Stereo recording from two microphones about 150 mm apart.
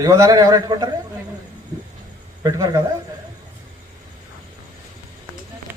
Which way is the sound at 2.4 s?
25° right (ahead or behind).